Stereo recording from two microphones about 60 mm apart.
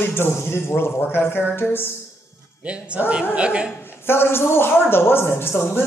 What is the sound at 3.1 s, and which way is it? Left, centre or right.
Speech, centre.